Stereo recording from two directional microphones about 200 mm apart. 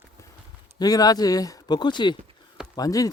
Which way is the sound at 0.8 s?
20° left (ahead or behind).